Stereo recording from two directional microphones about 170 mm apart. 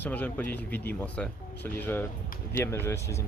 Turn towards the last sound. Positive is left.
turn(degrees=15)  # may be behind; listen again after turning